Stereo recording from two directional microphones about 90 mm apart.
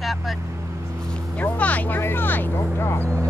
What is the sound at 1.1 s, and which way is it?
Speech, 15° left (ahead or behind).